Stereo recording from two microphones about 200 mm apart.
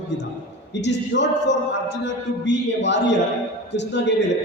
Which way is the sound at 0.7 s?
60° left (ahead or behind).